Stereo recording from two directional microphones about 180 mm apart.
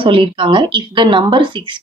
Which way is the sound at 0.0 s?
30° right (ahead or behind).